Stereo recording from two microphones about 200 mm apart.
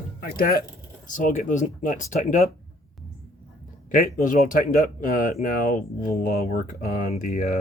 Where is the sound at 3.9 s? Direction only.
40° left (ahead or behind).